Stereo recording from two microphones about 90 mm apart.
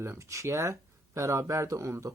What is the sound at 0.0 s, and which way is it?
Speech, 35° right (ahead or behind).